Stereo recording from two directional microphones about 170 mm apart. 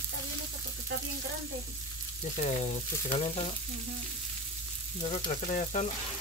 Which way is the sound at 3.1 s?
30° left (ahead or behind).